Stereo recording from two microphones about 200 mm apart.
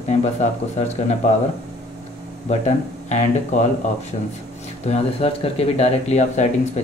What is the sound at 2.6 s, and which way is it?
Speech, 35° left (ahead or behind).